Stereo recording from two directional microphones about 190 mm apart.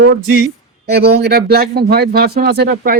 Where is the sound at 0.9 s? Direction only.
60° right (ahead or behind).